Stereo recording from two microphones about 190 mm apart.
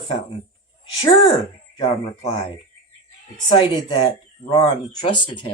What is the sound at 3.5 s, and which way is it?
Speech, 25° left (ahead or behind).